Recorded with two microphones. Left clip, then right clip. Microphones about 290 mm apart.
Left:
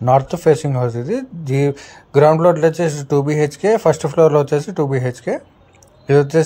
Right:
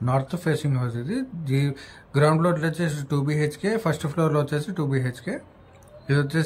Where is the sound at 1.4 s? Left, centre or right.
Centre.